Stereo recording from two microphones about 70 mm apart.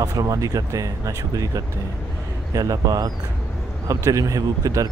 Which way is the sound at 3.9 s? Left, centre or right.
Right.